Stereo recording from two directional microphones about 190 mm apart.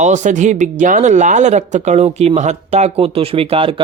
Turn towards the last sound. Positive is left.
turn(degrees=-30)  # may be behind; listen again after turning